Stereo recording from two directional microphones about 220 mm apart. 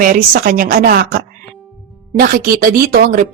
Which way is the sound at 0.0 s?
40° right (ahead or behind).